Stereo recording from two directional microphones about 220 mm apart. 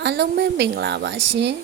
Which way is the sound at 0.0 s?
50° right (ahead or behind).